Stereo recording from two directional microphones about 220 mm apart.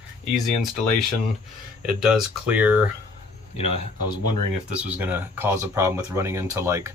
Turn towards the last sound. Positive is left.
turn(degrees=-10)  # may be behind; listen again after turning